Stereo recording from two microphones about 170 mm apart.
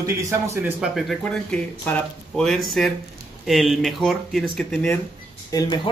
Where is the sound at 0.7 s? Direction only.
Centre (ahead or behind).